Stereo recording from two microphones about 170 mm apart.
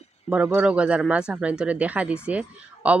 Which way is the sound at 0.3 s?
5° right (ahead or behind).